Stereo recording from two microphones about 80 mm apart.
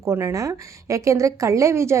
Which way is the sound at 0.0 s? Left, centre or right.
Right.